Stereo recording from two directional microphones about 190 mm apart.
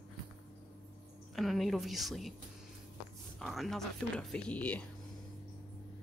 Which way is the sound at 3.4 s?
Centre (ahead or behind).